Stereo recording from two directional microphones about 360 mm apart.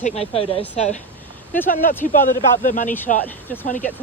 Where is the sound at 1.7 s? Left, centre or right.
Left.